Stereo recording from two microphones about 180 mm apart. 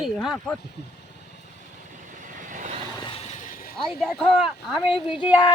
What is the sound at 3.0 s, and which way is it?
Vehicle, 30° left (ahead or behind).